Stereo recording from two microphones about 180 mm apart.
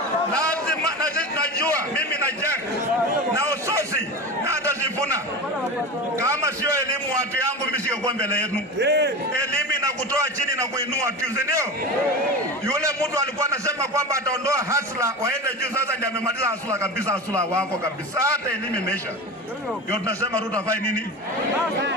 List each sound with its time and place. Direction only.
3.3 s a sound: 15° right (ahead or behind)
6.1 s a man's voice: 15° right (ahead or behind)
8.2 s a man's voice: 60° left (ahead or behind)
8.8 s a man's voice: 70° right (ahead or behind)
9.8 s a man's voice: 15° right (ahead or behind)
12.6 s a man's voice: 15° right (ahead or behind)